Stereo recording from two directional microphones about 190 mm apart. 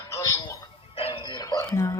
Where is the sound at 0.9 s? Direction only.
30° left (ahead or behind); by 1.9 s 15° left (ahead or behind).